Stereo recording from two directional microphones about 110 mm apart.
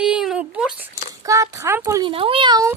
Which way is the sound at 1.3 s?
25° right (ahead or behind).